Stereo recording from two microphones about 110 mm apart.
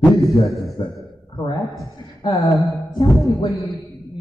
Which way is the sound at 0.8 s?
45° left (ahead or behind).